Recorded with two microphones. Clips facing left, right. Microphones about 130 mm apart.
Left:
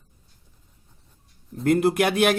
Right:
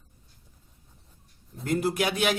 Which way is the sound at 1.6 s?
60° left (ahead or behind).